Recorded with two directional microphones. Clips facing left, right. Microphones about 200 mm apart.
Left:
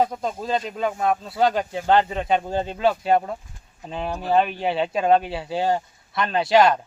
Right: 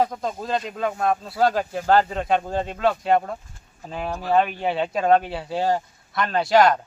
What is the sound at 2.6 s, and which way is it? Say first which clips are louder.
Speech: left 2 dB; 25° left (ahead or behind).